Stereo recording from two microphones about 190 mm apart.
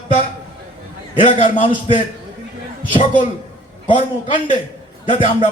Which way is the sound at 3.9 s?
25° left (ahead or behind).